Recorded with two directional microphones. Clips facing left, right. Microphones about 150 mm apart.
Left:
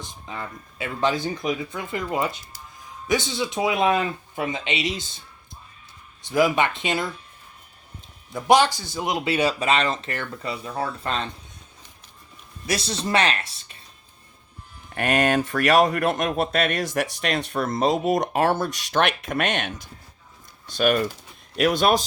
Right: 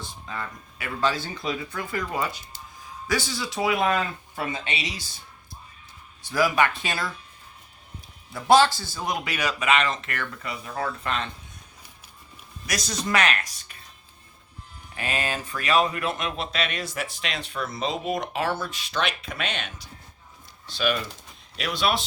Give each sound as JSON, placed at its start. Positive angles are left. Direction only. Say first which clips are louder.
{"t": 0.0, "sound": "speech", "louder": "left 1 dB", "side_deg": 20}
{"t": 6.2, "sound": "speech", "louder": "left 2 dB", "side_deg": 20}
{"t": 8.3, "sound": "speech", "louder": "even", "side_deg": 15}
{"t": 12.6, "sound": "speech", "louder": "left 3 dB", "side_deg": 30}
{"t": 14.9, "sound": "speech", "louder": "left 9 dB", "side_deg": 65}